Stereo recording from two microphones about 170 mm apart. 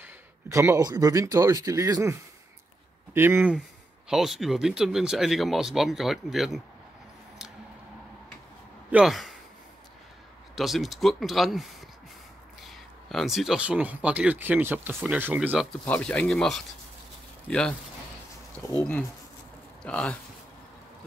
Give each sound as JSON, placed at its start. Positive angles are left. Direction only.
{"t": 0.0, "sound": "speech", "side_deg": -15}
{"t": 3.2, "sound": "speech", "side_deg": -15}
{"t": 4.1, "sound": "speech", "side_deg": 0}
{"t": 8.9, "sound": "speech", "side_deg": 0}
{"t": 10.5, "sound": "speech", "side_deg": 0}
{"t": 12.6, "sound": "speech", "side_deg": 0}
{"t": 15.8, "sound": "speech", "side_deg": 5}
{"t": 19.8, "sound": "speech", "side_deg": 5}